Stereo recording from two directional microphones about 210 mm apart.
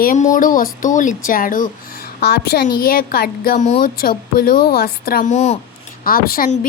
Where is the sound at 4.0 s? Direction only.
45° left (ahead or behind).